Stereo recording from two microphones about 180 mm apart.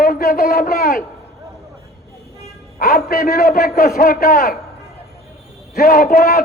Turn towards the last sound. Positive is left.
turn(degrees=55)  # may be behind; listen again after turning